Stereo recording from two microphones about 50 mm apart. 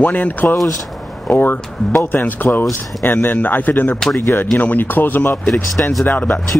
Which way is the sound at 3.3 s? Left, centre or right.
Left.